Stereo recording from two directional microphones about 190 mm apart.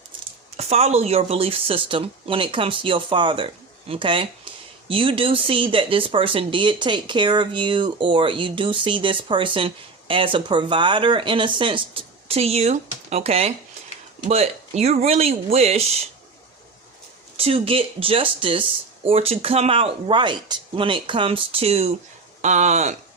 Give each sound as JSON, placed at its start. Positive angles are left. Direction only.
{"t": 0.5, "sound": "speech", "side_deg": -35}
{"t": 17.3, "sound": "speech", "side_deg": -30}